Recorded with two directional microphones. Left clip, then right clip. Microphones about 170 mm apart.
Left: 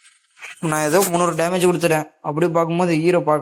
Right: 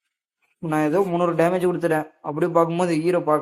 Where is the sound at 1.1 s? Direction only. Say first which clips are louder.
Left 1 dB; 20° left (ahead or behind).